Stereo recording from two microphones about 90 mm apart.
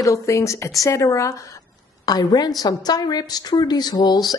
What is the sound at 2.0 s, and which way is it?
A woman's voice, 45° left (ahead or behind).